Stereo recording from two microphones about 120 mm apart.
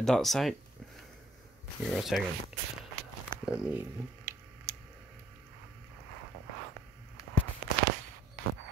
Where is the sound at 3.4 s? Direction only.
10° right (ahead or behind).